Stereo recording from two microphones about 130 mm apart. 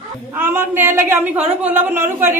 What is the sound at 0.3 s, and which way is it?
A woman's voice, 15° right (ahead or behind).